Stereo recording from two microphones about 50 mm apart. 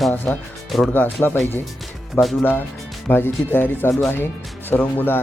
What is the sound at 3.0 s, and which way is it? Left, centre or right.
Speech, left.